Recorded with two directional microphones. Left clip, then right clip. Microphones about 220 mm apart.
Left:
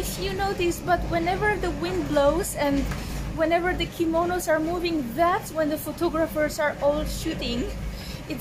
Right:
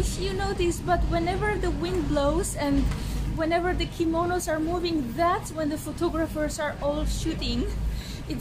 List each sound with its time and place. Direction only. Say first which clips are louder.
0.2 s a woman's voice: left 2 dB; 5° left (ahead or behind)